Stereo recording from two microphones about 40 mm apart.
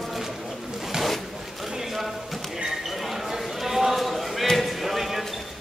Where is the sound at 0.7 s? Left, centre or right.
Centre.